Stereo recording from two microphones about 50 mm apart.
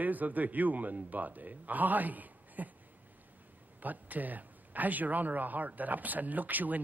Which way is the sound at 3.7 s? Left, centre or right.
Right.